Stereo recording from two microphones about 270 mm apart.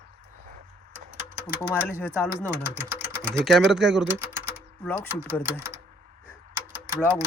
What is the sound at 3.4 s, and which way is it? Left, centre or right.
Speech, centre.